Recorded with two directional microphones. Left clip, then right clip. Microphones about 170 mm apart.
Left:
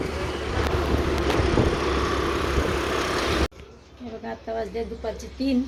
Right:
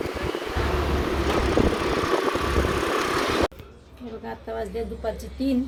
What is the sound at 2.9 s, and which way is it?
Vehicle, 45° right (ahead or behind).